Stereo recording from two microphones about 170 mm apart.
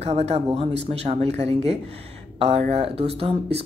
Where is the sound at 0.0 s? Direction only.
40° right (ahead or behind).